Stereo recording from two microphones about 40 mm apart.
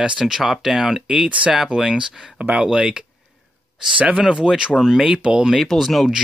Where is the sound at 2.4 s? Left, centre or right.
Right.